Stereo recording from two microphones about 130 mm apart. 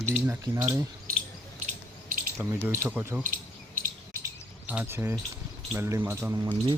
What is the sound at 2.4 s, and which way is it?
Speech, 20° right (ahead or behind).